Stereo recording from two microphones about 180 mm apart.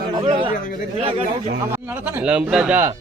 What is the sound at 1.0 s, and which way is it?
Speech, 35° right (ahead or behind).